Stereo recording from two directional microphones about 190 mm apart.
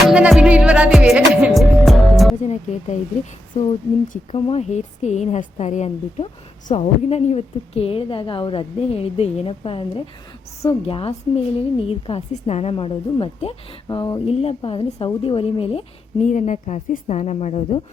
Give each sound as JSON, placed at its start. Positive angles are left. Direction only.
{"t": 0.1, "sound": "music", "side_deg": -5}
{"t": 2.3, "sound": "music", "side_deg": 40}
{"t": 4.1, "sound": "a woman's voice", "side_deg": 35}